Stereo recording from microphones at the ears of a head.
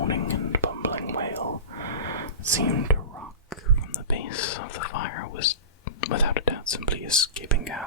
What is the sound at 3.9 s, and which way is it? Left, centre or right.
Whispering, left.